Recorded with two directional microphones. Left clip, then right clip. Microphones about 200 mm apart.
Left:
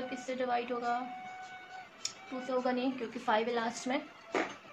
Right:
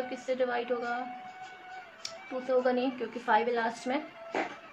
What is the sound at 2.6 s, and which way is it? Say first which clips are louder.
A woman's voice: right 2 dB; 30° right (ahead or behind).